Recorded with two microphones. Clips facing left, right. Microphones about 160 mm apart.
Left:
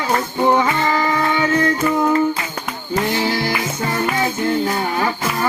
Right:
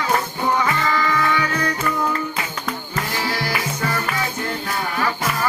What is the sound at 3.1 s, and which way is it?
Music, 25° left (ahead or behind).